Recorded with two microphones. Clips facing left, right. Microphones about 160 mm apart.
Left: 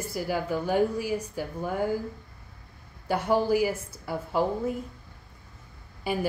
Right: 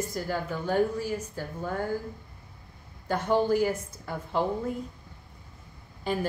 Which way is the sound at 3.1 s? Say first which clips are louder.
Left 1 dB; 10° left (ahead or behind).